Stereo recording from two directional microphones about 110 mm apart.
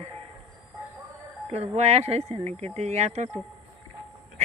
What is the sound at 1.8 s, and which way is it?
Speech, 75° right (ahead or behind).